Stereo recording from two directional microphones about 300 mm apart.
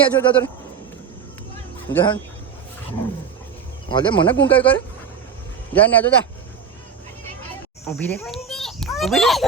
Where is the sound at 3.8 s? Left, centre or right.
Centre.